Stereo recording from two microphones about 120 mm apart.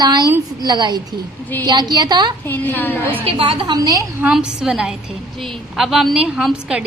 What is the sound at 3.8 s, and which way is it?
Speech, 30° right (ahead or behind).